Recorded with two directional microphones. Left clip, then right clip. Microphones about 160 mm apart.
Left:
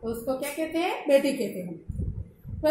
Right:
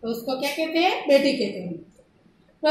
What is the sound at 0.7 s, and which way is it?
Speech, 65° left (ahead or behind).